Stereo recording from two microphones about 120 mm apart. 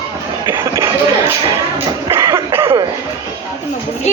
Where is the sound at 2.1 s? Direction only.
25° right (ahead or behind).